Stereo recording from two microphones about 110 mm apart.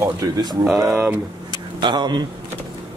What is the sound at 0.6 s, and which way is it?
Speech, 5° right (ahead or behind).